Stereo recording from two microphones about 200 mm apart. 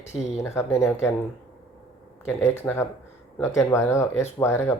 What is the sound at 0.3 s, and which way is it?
Speech, 15° left (ahead or behind).